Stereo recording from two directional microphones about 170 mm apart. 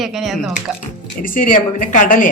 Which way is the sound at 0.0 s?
Centre (ahead or behind).